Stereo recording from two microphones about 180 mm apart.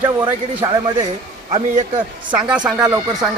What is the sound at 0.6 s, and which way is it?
Speech, 20° right (ahead or behind).